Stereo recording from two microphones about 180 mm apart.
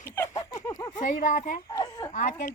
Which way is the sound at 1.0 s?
45° left (ahead or behind).